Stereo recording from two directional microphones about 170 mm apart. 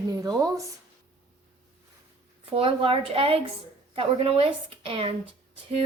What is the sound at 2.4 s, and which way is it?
A woman's voice, 35° right (ahead or behind).